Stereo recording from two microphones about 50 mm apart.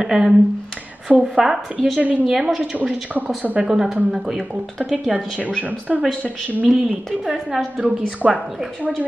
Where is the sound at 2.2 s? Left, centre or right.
Centre.